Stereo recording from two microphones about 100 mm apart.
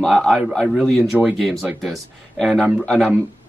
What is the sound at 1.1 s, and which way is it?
Speech, 10° right (ahead or behind).